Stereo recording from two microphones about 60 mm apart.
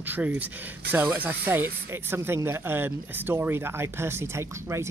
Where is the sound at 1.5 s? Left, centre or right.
Right.